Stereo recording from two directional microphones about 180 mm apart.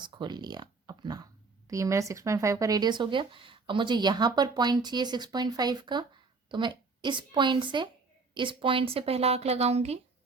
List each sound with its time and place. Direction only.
0.0 s a woman's voice: 25° right (ahead or behind)